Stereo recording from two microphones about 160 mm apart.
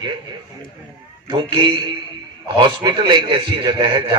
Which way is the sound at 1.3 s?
30° right (ahead or behind).